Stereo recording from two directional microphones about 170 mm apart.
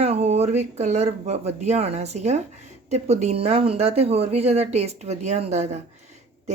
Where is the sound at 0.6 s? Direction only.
40° right (ahead or behind).